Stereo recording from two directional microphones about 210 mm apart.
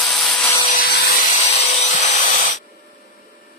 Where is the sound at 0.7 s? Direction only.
45° left (ahead or behind).